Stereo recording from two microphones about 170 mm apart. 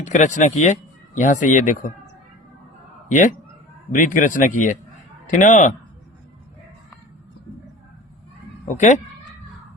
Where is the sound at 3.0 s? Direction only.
50° left (ahead or behind).